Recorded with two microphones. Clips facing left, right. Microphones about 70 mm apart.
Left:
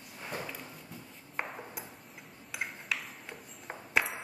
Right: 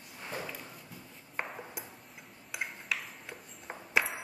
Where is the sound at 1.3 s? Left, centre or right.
Centre.